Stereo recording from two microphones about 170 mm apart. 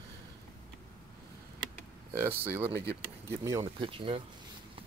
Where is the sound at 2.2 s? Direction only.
10° right (ahead or behind).